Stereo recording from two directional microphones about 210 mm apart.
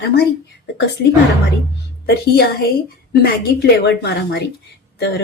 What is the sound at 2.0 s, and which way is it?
A woman's voice, 50° left (ahead or behind).